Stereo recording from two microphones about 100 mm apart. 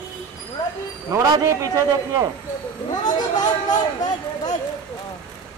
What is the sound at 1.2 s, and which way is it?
A man's voice, 30° right (ahead or behind).